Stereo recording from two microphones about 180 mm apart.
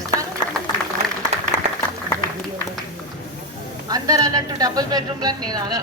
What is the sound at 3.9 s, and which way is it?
Speech, 20° right (ahead or behind).